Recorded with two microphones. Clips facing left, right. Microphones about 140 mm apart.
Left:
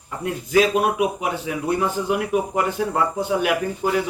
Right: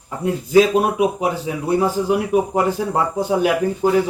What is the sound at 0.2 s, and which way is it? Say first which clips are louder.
A man's voice: right 5 dB; 35° right (ahead or behind).